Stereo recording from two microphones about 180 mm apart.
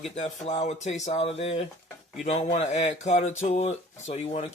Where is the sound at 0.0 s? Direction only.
40° left (ahead or behind).